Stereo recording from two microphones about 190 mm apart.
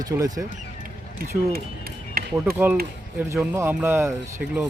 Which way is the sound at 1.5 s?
50° right (ahead or behind).